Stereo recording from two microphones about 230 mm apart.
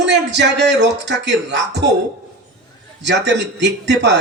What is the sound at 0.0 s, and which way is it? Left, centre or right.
Speech, right.